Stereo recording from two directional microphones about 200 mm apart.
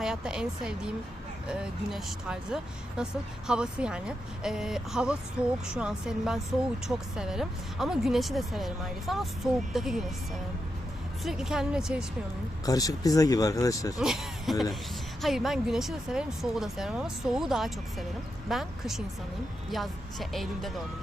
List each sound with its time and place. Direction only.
0.0 s a woman's voice: 5° right (ahead or behind)
11.2 s a woman's voice: centre (ahead or behind)
12.6 s speech: 20° left (ahead or behind)
14.0 s a sound: centre (ahead or behind)
15.2 s a woman's voice: centre (ahead or behind)